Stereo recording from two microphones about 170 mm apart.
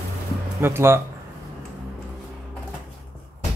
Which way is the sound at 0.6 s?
15° right (ahead or behind).